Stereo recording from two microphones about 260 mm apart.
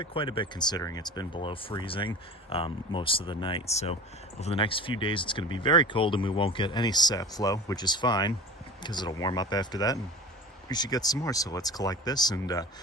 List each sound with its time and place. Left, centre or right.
0.0 s speech: centre